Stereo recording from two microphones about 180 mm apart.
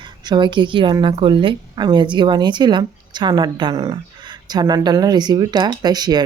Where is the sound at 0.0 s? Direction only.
25° right (ahead or behind).